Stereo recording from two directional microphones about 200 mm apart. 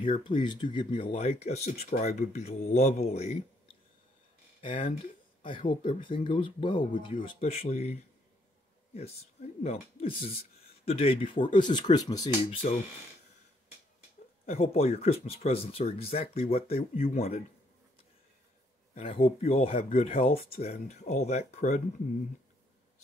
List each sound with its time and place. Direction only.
0.0 s speech: 25° left (ahead or behind)
4.6 s speech: 30° left (ahead or behind)
12.6 s speech: 35° left (ahead or behind)
14.4 s speech: 35° left (ahead or behind)
18.9 s speech: 35° left (ahead or behind)